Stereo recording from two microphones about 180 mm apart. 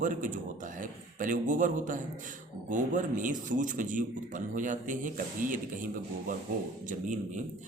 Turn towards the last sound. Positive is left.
turn(degrees=-45)  # may be behind; listen again after turning